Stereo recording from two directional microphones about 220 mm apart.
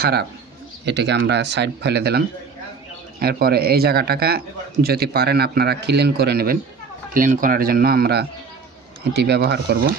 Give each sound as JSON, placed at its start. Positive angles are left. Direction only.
{"t": 0.8, "sound": "a man's voice", "side_deg": -50}